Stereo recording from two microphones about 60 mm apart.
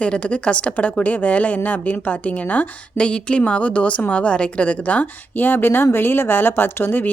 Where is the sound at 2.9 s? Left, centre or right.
Centre.